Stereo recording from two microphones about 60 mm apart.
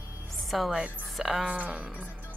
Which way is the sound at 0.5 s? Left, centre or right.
Centre.